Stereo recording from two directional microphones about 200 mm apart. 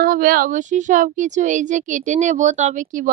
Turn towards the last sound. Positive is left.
turn(degrees=-40)  # may be behind; listen again after turning